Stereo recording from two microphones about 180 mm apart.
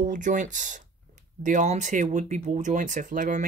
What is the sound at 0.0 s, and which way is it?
Speech, 45° right (ahead or behind).